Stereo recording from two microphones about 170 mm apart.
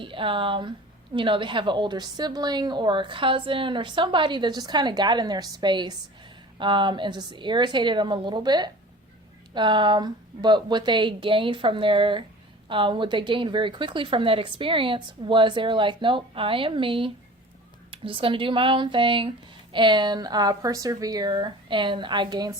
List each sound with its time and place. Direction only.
0.0 s a woman's voice: 30° right (ahead or behind)